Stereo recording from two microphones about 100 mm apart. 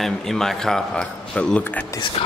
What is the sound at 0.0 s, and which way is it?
Speech, 5° left (ahead or behind).